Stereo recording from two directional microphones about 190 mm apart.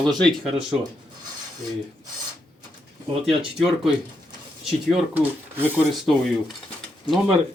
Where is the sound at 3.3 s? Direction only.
Centre (ahead or behind).